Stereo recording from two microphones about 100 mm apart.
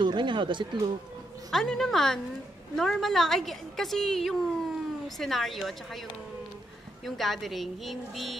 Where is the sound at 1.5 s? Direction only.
5° left (ahead or behind).